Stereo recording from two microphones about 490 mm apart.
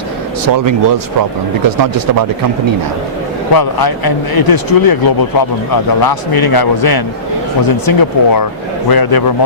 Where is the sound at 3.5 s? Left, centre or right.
Left.